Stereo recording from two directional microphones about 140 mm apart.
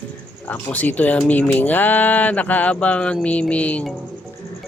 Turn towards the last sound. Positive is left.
turn(degrees=10)  # may be behind; listen again after turning